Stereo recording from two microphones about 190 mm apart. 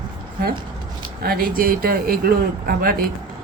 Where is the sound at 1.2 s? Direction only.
50° right (ahead or behind).